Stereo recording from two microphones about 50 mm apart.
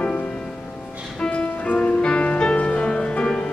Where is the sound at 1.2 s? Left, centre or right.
Left.